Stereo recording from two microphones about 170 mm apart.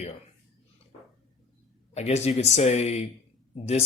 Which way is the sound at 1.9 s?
40° left (ahead or behind).